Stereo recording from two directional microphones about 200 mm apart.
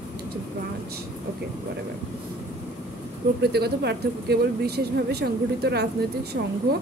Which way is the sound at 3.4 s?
55° right (ahead or behind).